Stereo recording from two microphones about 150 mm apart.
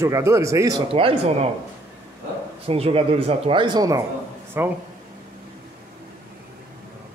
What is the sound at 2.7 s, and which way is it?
Speech, 40° right (ahead or behind).